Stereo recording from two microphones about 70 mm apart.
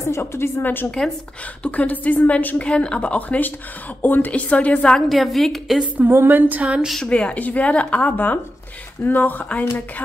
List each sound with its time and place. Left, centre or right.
0.0 s a woman's voice: left; by 4.9 s centre
4.9 s a woman's voice: centre
5.9 s speech: right
6.6 s speech: centre
7.1 s a woman's voice: centre